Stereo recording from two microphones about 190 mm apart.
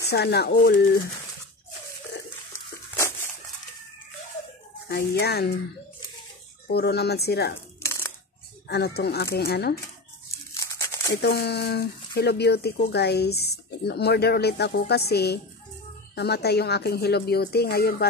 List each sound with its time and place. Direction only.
0.1 s speech: 60° left (ahead or behind)
4.8 s speech: 55° left (ahead or behind)
6.7 s speech: 55° left (ahead or behind)
7.8 s crushing: 15° left (ahead or behind)
8.6 s speech: 60° left (ahead or behind)
10.5 s crumpling: 15° left (ahead or behind)
11.1 s speech: 60° left (ahead or behind)